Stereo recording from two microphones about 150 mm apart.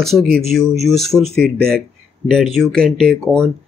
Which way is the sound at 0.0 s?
Centre (ahead or behind).